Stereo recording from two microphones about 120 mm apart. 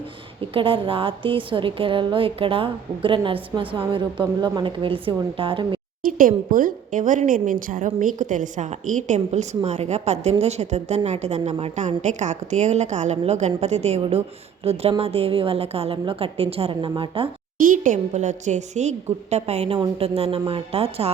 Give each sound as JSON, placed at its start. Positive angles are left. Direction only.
{"t": 0.5, "sound": "a woman's voice", "side_deg": -50}
{"t": 6.9, "sound": "a woman's voice", "side_deg": -90}
{"t": 17.7, "sound": "a woman's voice", "side_deg": -90}
{"t": 19.3, "sound": "a woman's voice", "side_deg": -60}